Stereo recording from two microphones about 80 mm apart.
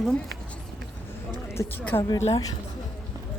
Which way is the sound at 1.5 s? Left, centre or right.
Left.